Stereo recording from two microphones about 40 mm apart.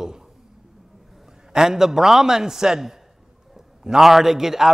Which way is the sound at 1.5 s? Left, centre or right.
Centre.